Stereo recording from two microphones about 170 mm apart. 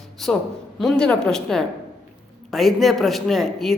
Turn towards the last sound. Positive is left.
turn(degrees=0)  # may be behind; listen again after turning